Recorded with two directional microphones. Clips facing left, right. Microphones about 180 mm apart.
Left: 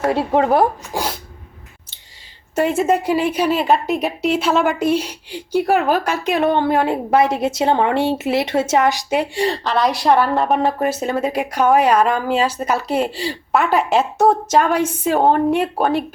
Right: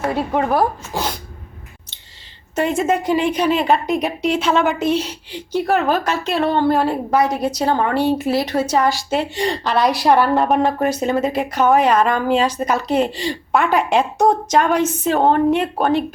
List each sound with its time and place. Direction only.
0.1 s speech: 25° left (ahead or behind)
0.9 s sneeze: 5° left (ahead or behind)
2.6 s a woman's voice: 5° left (ahead or behind)